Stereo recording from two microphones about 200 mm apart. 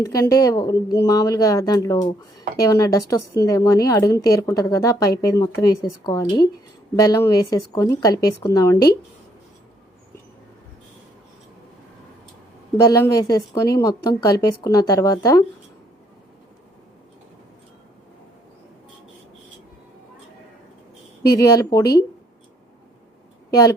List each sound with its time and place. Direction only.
0.0 s speech: 15° left (ahead or behind)
12.7 s speech: 15° left (ahead or behind)
21.3 s speech: 15° left (ahead or behind)